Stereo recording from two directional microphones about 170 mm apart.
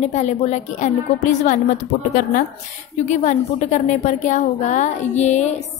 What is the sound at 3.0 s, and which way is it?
A woman's voice, 45° left (ahead or behind).